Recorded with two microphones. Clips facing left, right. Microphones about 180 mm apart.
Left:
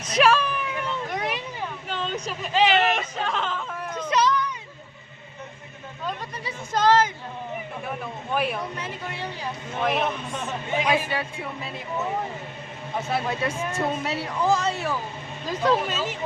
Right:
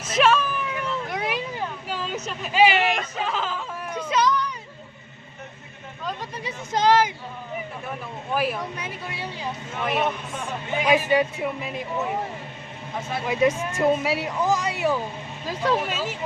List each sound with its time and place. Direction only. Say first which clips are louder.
0.0 s a sound: even; centre (ahead or behind)
6.7 s speech: even; 15° right (ahead or behind)
8.3 s speech: right 1 dB; centre (ahead or behind)
10.8 s speech: right 9 dB; 15° right (ahead or behind)
13.2 s speech: right 5 dB; 15° right (ahead or behind)